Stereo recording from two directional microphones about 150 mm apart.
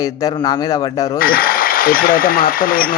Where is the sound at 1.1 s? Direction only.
75° left (ahead or behind).